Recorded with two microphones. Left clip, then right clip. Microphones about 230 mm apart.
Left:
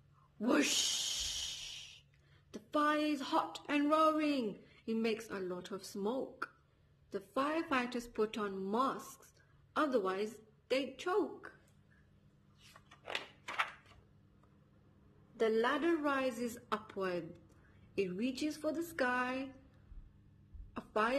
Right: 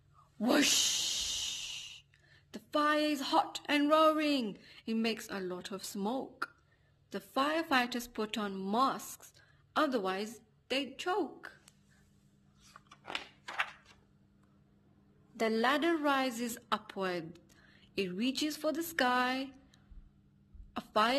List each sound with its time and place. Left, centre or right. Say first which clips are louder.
0.4 s speech: right 3 dB; right
0.8 s music: right 4 dB; right
2.5 s a woman's voice: right 3 dB; right
12.6 s a sound: even; centre
15.3 s a woman's voice: right 2 dB; right
20.7 s a sound: right 4 dB; right